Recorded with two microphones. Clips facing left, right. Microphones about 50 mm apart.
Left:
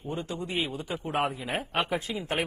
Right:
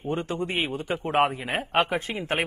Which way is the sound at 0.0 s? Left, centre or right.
Right.